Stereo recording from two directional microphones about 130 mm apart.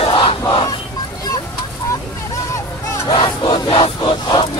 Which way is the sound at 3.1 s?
35° left (ahead or behind).